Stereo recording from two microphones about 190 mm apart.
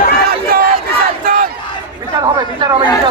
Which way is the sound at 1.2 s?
50° right (ahead or behind).